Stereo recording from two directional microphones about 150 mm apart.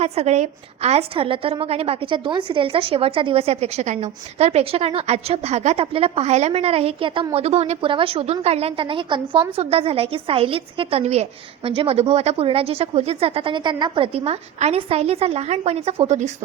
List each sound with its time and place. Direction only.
0.0 s a woman's voice: 45° right (ahead or behind)